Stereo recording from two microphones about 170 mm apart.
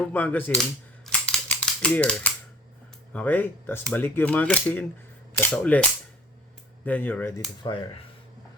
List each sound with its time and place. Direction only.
0.1 s speech: 10° left (ahead or behind)
1.0 s a sound: 5° left (ahead or behind)
3.1 s speech: 10° left (ahead or behind)
7.6 s speech: 30° left (ahead or behind)